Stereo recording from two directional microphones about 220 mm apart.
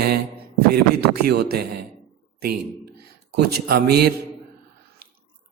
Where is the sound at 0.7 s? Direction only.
45° right (ahead or behind).